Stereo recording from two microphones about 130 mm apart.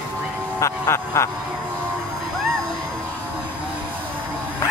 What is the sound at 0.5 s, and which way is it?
Speech, 20° left (ahead or behind).